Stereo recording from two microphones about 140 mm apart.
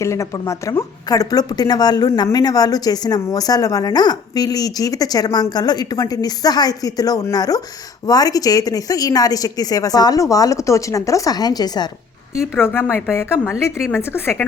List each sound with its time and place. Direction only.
0.0 s a woman's voice: 20° left (ahead or behind)
12.5 s a woman's voice: 15° left (ahead or behind)